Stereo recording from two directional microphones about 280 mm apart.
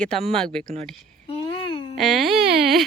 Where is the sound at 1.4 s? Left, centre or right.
Centre.